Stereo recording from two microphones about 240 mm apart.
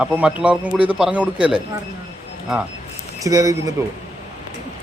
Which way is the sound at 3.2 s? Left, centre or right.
Centre.